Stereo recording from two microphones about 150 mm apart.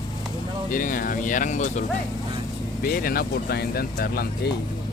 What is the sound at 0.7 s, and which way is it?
Speech, 65° left (ahead or behind).